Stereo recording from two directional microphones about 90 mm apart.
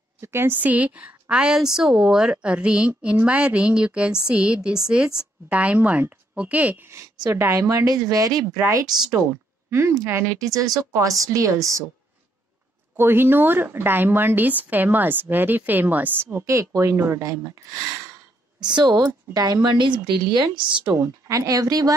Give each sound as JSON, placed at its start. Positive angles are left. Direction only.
{"t": 0.2, "sound": "speech", "side_deg": -30}
{"t": 7.2, "sound": "speech", "side_deg": -30}
{"t": 12.9, "sound": "speech", "side_deg": -25}
{"t": 18.6, "sound": "a woman's voice", "side_deg": -55}
{"t": 20.9, "sound": "speech", "side_deg": -35}